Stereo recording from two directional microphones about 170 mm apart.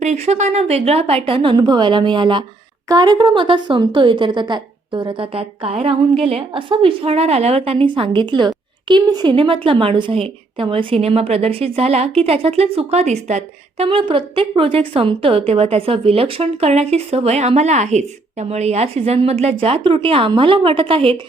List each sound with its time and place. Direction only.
0.0 s a woman's voice: 40° right (ahead or behind)